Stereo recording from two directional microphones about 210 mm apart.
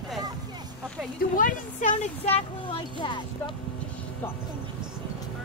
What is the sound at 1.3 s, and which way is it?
A woman's voice, 40° left (ahead or behind).